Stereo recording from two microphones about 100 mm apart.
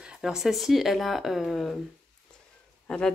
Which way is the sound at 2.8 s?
10° left (ahead or behind).